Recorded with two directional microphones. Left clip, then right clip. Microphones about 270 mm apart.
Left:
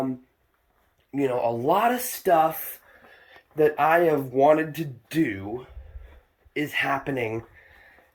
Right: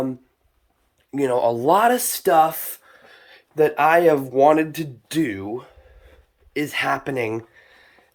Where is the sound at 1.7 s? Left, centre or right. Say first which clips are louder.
Right 5 dB; right.